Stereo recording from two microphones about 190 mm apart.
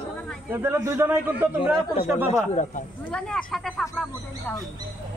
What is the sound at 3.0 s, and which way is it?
Speech, 5° left (ahead or behind).